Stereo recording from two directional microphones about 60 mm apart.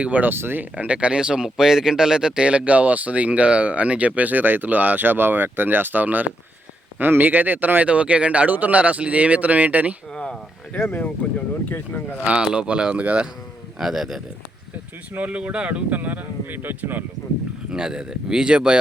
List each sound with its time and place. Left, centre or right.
0.0 s speech: right
0.9 s speech: centre
10.1 s speech: centre
10.8 s speech: left
12.1 s speech: right
13.7 s speech: centre
15.1 s speech: right
17.7 s speech: centre